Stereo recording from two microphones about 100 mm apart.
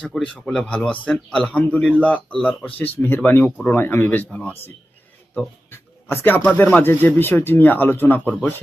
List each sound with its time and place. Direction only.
0.1 s speech: 10° left (ahead or behind)
5.7 s speech: 20° left (ahead or behind)